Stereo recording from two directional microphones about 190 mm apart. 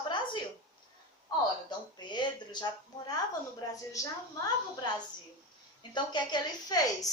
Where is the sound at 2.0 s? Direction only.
25° left (ahead or behind).